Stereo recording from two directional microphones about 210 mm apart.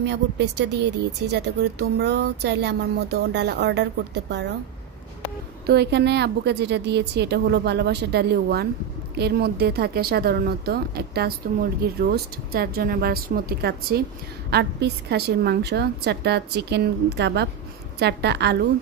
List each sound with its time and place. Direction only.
0.0 s speech: 55° right (ahead or behind)
5.7 s speech: 55° right (ahead or behind)